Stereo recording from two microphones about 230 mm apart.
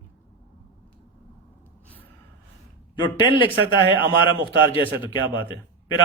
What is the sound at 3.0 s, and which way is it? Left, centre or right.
Speech, left.